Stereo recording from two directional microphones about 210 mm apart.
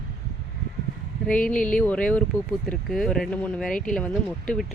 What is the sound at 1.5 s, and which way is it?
Speech, 40° left (ahead or behind).